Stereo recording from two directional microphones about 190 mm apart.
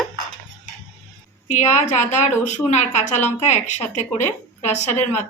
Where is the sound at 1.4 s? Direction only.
40° left (ahead or behind).